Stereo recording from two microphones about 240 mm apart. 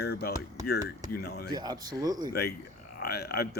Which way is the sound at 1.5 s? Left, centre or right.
Centre.